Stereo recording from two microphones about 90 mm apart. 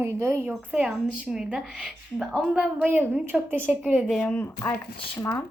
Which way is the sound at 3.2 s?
25° right (ahead or behind).